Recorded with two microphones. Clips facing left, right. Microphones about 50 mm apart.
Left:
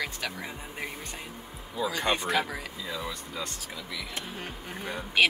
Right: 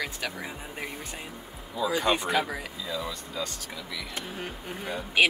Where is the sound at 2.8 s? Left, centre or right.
Left.